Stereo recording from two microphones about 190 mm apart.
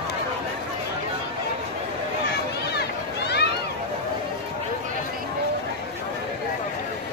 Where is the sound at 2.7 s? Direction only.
60° left (ahead or behind).